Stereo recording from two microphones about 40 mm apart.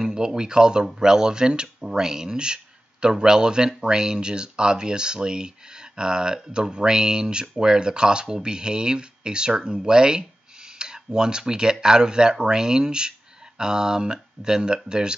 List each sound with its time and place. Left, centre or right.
0.0 s speech: centre